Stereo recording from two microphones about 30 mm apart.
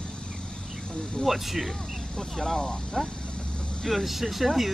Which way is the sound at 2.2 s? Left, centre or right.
Left.